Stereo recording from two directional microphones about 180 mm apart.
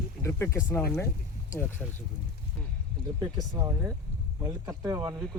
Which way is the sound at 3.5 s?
15° right (ahead or behind).